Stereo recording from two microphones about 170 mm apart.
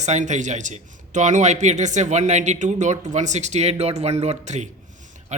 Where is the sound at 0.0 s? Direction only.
45° right (ahead or behind).